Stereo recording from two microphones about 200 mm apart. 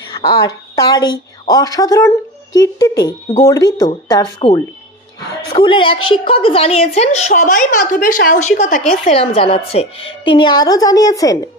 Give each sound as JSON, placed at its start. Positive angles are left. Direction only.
{"t": 0.3, "sound": "a woman's voice", "side_deg": 20}